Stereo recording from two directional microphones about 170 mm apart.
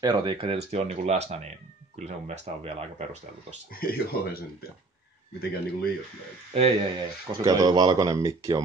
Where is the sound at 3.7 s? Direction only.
60° left (ahead or behind).